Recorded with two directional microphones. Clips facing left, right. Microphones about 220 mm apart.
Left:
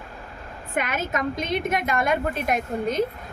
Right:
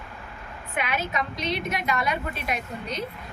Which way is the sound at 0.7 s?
45° left (ahead or behind).